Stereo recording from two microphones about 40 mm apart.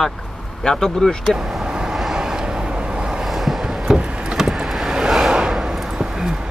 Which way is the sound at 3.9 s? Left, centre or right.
Right.